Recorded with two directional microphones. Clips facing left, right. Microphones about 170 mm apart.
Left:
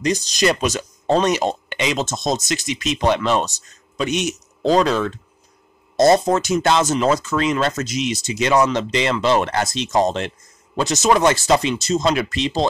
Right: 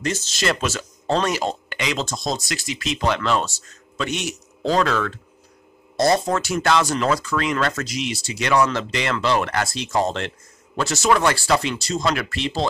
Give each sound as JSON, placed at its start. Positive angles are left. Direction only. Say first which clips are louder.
{"t": 0.0, "sound": "speech", "louder": "left 5 dB", "side_deg": 15}